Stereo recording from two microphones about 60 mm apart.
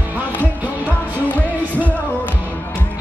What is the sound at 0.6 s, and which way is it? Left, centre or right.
Music, right.